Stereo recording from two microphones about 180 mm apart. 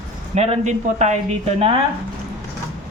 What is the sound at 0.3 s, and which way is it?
Speech, 40° right (ahead or behind).